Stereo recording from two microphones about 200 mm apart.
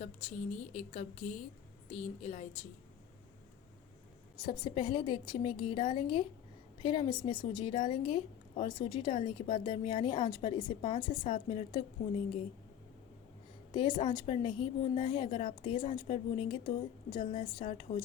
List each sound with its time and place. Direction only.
0.0 s a sound: 30° left (ahead or behind)
0.8 s a woman's voice: 35° left (ahead or behind)
4.4 s a woman's voice: 20° left (ahead or behind)
13.7 s a woman's voice: 25° left (ahead or behind)